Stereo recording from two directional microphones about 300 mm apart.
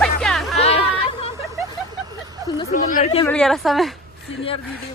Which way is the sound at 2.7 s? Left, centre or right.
Left.